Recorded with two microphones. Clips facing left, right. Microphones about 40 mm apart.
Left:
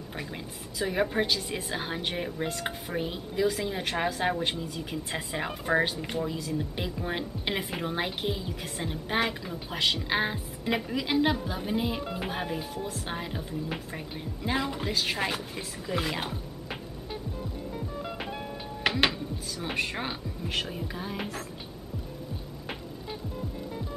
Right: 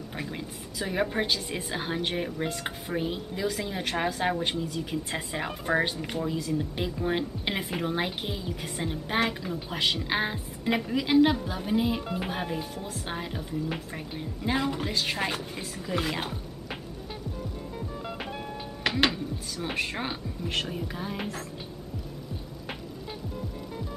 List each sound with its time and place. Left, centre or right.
0.1 s a woman's voice: centre
17.7 s music: centre
18.9 s music: centre
19.1 s a woman's voice: centre